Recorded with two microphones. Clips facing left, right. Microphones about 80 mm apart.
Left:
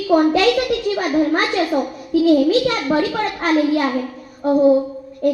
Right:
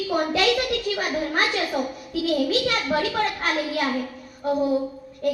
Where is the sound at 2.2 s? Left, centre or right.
Left.